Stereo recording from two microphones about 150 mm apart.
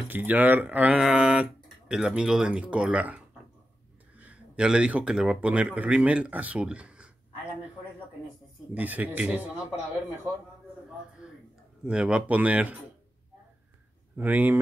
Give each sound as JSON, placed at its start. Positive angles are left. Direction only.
{"t": 0.1, "sound": "speech", "side_deg": -10}
{"t": 8.7, "sound": "speech", "side_deg": -10}
{"t": 11.2, "sound": "a sound", "side_deg": -5}
{"t": 11.8, "sound": "speech", "side_deg": -5}
{"t": 14.1, "sound": "speech", "side_deg": -10}